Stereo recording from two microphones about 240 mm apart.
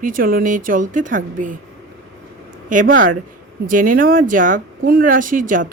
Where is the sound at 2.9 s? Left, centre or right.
Right.